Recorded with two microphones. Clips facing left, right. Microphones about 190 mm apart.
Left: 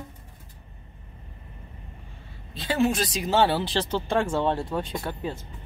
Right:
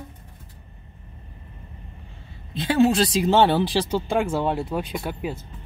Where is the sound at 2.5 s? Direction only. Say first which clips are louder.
Right 5 dB; 30° right (ahead or behind); by 5.3 s 10° right (ahead or behind).